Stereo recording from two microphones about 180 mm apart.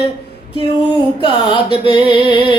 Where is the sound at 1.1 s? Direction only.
25° left (ahead or behind).